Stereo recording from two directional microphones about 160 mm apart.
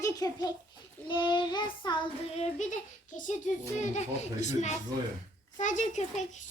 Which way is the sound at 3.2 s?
50° left (ahead or behind).